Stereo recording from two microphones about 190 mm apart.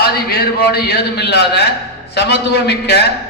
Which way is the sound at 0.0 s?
55° left (ahead or behind).